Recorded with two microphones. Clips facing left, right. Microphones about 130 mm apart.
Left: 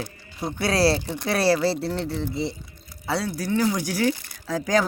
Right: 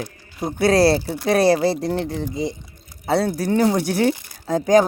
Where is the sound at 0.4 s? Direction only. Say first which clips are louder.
Right 5 dB; 50° right (ahead or behind).